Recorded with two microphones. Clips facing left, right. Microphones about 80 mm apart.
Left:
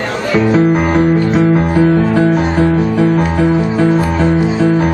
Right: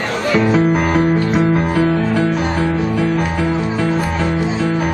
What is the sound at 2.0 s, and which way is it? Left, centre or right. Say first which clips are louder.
Music: left 5 dB; left.